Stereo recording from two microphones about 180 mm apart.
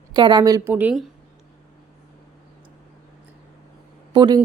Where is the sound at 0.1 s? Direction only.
25° right (ahead or behind); by 1.0 s 10° right (ahead or behind).